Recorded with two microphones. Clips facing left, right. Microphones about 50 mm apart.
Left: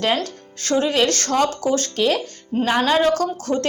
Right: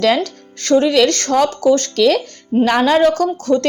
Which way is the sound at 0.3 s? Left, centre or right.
Right.